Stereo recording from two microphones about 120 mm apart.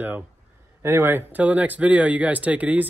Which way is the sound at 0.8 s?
20° right (ahead or behind).